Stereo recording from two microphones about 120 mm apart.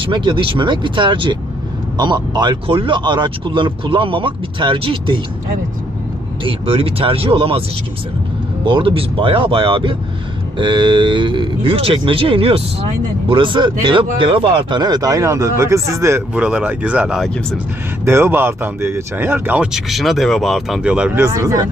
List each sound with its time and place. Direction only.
0.0 s speech: 45° right (ahead or behind)
6.4 s speech: 50° right (ahead or behind)
8.6 s speech: 45° right (ahead or behind); by 16.2 s 25° right (ahead or behind)
16.3 s speech: 10° right (ahead or behind)
17.2 s speech: 5° left (ahead or behind)
18.0 s speech: 20° right (ahead or behind)
19.7 s speech: centre (ahead or behind)
21.2 s speech: 25° right (ahead or behind)